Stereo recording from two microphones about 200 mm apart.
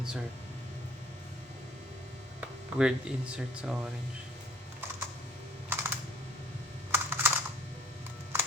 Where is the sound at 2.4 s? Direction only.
5° right (ahead or behind).